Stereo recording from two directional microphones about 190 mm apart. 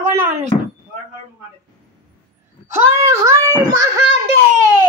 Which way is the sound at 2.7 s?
15° right (ahead or behind).